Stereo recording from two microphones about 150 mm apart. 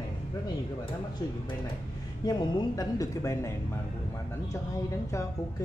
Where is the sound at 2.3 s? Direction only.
25° left (ahead or behind).